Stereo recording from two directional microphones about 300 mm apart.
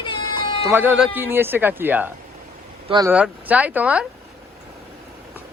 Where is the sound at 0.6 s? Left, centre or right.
Centre.